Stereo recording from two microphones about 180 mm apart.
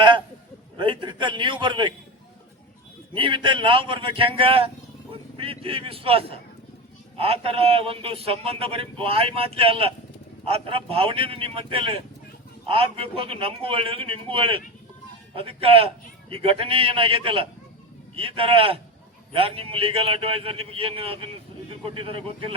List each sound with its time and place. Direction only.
0.8 s a man's voice: 25° right (ahead or behind)
3.2 s a man's voice: 25° right (ahead or behind)